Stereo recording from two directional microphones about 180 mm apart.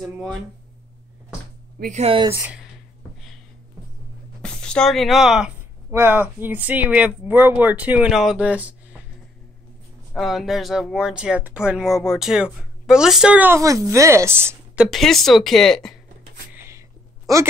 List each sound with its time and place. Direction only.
0.0 s speech: centre (ahead or behind)
1.8 s speech: 40° right (ahead or behind)
2.3 s speech: 5° right (ahead or behind)
4.4 s speech: 5° left (ahead or behind)
10.1 s speech: centre (ahead or behind)
14.9 s speech: centre (ahead or behind)
16.5 s a sound: 15° right (ahead or behind)